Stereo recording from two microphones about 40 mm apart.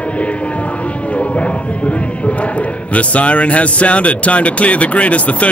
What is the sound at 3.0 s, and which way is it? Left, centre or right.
Speech, left.